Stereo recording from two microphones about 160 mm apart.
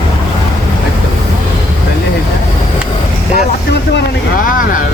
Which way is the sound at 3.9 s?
60° left (ahead or behind).